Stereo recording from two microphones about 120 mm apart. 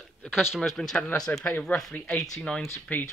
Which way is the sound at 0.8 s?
5° left (ahead or behind).